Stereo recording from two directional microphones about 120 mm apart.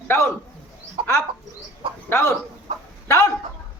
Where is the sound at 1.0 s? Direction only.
55° right (ahead or behind).